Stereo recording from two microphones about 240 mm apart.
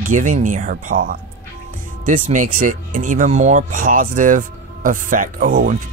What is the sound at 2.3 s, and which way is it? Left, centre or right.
Speech, right.